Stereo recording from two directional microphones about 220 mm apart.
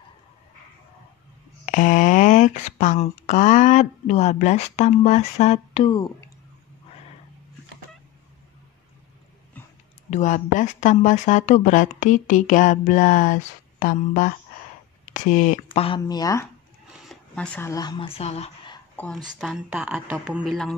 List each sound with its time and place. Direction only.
1.7 s speech: 35° left (ahead or behind)
10.0 s speech: 30° left (ahead or behind); by 16.4 s 15° left (ahead or behind)
17.0 s speech: 5° left (ahead or behind); by 18.8 s 30° left (ahead or behind)
19.2 s speech: centre (ahead or behind)